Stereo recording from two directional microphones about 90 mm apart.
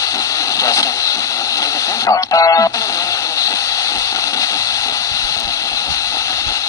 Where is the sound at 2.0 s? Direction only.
40° left (ahead or behind).